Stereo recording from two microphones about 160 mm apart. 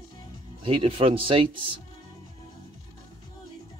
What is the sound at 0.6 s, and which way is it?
Speech, 35° right (ahead or behind).